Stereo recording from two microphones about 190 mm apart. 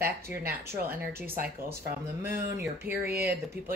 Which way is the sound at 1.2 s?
50° right (ahead or behind).